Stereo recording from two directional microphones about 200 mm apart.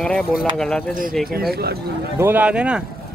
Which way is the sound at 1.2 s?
50° right (ahead or behind).